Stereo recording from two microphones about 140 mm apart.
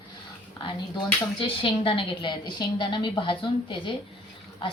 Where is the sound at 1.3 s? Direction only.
35° left (ahead or behind).